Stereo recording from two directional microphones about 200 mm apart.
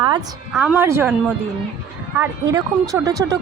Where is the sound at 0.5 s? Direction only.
5° right (ahead or behind).